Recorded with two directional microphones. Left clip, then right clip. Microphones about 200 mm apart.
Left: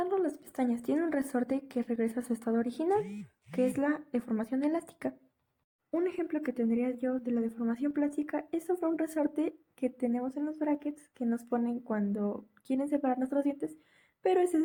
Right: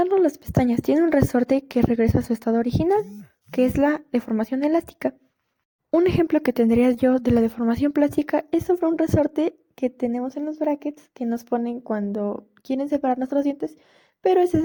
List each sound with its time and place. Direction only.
0.0 s speech: 35° right (ahead or behind)
6.0 s a woman's voice: 40° right (ahead or behind)